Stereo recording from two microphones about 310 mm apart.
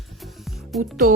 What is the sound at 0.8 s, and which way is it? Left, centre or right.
Speech, right.